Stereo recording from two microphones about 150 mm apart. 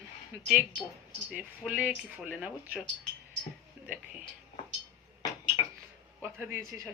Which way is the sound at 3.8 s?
10° right (ahead or behind).